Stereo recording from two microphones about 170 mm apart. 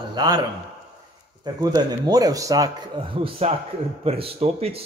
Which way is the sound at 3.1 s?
35° right (ahead or behind).